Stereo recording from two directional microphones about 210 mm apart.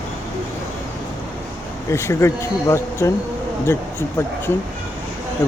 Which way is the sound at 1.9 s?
15° left (ahead or behind).